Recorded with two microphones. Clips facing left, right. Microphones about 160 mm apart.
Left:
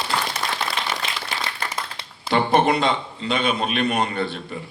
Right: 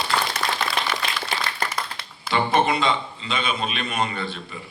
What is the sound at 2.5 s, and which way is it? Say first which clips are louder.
A man's voice: left 2 dB; 55° left (ahead or behind).